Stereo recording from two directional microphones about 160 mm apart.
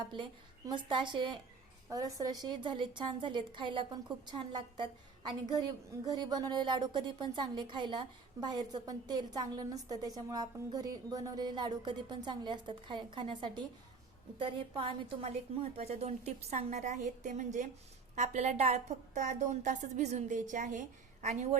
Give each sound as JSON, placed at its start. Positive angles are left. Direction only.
{"t": 0.7, "sound": "a woman's voice", "side_deg": -30}